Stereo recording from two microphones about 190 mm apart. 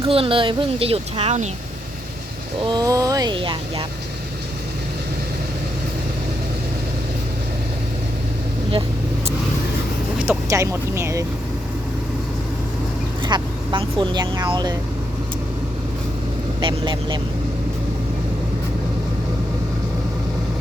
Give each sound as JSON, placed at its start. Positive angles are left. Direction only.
{"t": 0.0, "sound": "speech", "side_deg": -30}
{"t": 2.6, "sound": "speech", "side_deg": -20}
{"t": 10.2, "sound": "speech", "side_deg": -15}
{"t": 13.2, "sound": "speech", "side_deg": -25}
{"t": 16.6, "sound": "speech", "side_deg": -25}